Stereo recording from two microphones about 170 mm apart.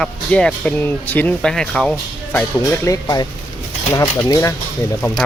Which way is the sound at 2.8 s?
20° left (ahead or behind).